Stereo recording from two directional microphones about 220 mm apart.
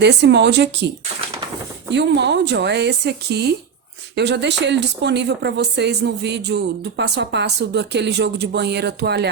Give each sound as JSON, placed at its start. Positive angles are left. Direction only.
{"t": 0.0, "sound": "speech", "side_deg": -50}
{"t": 1.9, "sound": "speech", "side_deg": -50}